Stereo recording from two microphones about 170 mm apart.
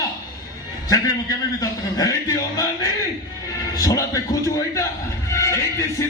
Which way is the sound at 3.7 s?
20° left (ahead or behind).